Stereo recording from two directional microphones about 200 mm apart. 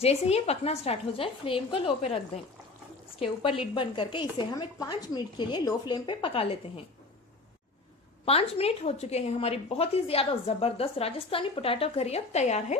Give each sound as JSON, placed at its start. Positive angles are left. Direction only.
{"t": 0.0, "sound": "a woman's voice", "side_deg": 30}
{"t": 8.2, "sound": "a woman's voice", "side_deg": 30}